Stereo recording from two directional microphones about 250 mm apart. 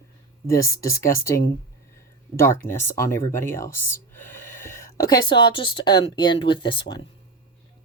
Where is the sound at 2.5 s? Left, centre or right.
Centre.